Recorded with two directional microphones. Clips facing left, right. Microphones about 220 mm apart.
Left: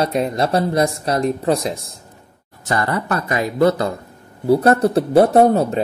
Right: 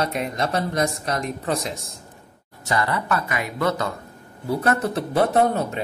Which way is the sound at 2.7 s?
50° left (ahead or behind).